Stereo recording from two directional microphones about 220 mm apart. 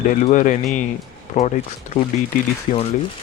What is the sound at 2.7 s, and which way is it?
Speech, 30° left (ahead or behind).